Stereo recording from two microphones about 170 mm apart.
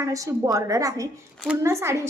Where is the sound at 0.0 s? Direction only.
20° right (ahead or behind).